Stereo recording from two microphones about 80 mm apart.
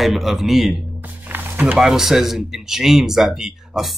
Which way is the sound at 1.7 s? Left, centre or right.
Centre.